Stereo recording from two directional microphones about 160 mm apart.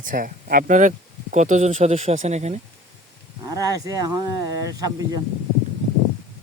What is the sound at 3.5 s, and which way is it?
Speech, 20° right (ahead or behind).